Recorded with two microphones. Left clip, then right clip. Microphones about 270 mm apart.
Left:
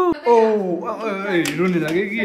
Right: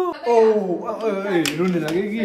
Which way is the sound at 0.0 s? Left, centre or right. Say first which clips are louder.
Left 2 dB; centre.